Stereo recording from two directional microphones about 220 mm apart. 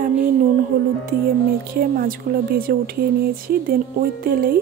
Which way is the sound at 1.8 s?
40° right (ahead or behind).